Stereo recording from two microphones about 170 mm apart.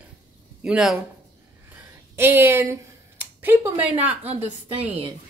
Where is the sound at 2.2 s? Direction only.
15° right (ahead or behind).